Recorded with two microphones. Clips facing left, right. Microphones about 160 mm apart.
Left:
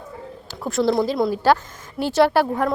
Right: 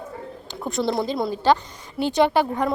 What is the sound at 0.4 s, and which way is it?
A woman's voice, centre (ahead or behind).